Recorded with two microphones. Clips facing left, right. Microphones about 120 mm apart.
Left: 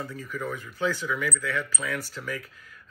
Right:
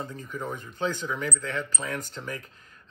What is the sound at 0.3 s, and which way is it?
Speech, 25° right (ahead or behind).